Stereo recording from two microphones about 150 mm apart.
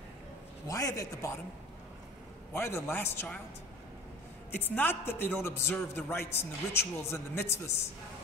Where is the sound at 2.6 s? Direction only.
15° left (ahead or behind).